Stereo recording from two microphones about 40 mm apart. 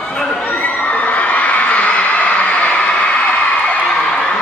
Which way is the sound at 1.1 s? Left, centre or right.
Left.